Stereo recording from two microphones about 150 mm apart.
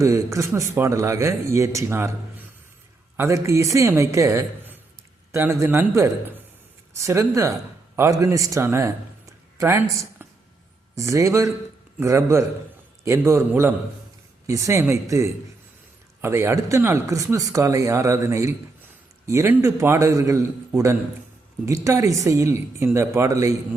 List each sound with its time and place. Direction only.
0.0 s a man's voice: 20° right (ahead or behind)